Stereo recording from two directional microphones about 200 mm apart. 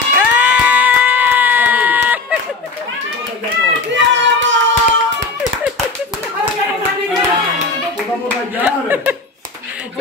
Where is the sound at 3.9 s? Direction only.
65° right (ahead or behind).